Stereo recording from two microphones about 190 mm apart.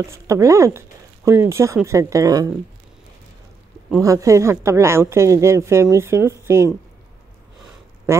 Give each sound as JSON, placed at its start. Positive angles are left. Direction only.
{"t": 0.1, "sound": "a woman's voice", "side_deg": -15}
{"t": 4.0, "sound": "a woman's voice", "side_deg": -15}